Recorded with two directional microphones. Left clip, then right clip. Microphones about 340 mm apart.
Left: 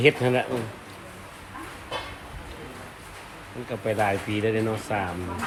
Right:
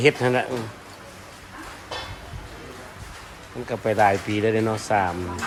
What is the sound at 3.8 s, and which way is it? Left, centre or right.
Speech, centre.